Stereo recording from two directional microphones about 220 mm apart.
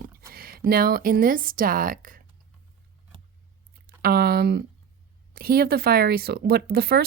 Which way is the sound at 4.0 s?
45° right (ahead or behind).